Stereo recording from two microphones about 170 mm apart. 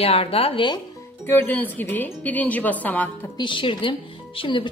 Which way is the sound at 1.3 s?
10° left (ahead or behind).